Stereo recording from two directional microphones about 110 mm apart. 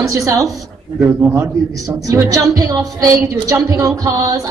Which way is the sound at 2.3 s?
30° right (ahead or behind).